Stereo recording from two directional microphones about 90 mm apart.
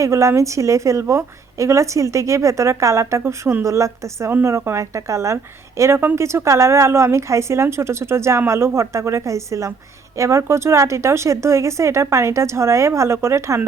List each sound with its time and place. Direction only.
0.0 s a woman's voice: 35° right (ahead or behind)